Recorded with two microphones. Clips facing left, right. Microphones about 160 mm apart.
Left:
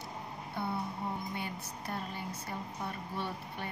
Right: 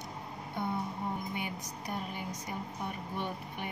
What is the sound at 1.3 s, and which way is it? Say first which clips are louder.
A woman's voice: right 1 dB; 15° right (ahead or behind).